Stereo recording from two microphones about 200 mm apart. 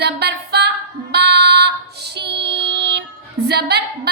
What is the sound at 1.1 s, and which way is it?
Child singing, 55° right (ahead or behind).